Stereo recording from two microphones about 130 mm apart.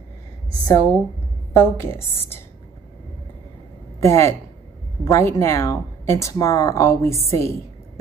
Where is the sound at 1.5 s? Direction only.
20° left (ahead or behind).